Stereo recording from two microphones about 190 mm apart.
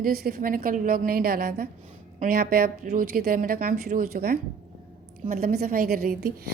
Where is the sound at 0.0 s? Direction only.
55° right (ahead or behind).